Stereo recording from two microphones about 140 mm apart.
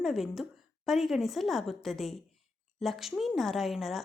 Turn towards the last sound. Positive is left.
turn(degrees=0)  # may be behind; listen again after turning